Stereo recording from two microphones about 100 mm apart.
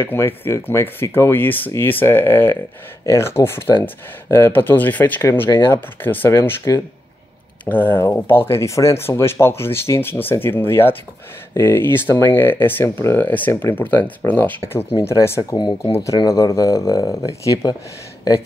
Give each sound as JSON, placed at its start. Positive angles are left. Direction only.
{"t": 0.0, "sound": "speech", "side_deg": 25}
{"t": 7.6, "sound": "speech", "side_deg": 20}
{"t": 15.5, "sound": "speech", "side_deg": 45}
{"t": 15.9, "sound": "speech", "side_deg": 30}